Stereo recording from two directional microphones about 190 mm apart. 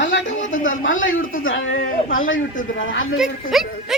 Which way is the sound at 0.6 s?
90° left.